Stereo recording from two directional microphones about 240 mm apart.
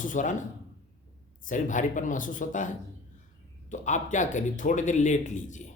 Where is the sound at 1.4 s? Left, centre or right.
Left.